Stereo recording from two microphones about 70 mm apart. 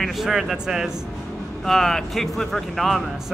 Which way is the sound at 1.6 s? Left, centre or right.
Centre.